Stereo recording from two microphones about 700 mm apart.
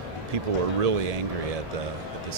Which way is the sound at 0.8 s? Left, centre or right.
Right.